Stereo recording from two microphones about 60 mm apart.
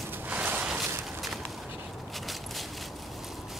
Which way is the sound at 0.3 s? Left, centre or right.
Right.